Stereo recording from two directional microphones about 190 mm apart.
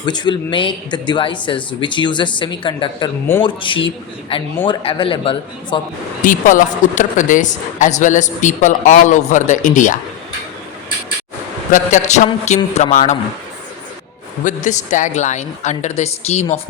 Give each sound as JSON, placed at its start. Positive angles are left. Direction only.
{"t": 0.0, "sound": "speech", "side_deg": 25}
{"t": 6.2, "sound": "speech", "side_deg": 45}
{"t": 11.7, "sound": "speech", "side_deg": 40}
{"t": 14.4, "sound": "speech", "side_deg": 40}